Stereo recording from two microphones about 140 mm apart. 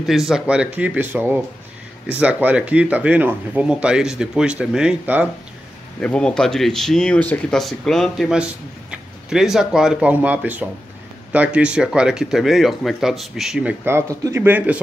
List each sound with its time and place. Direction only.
0.0 s speech: centre (ahead or behind)
5.9 s speech: 5° left (ahead or behind)
13.8 s speech: 20° right (ahead or behind)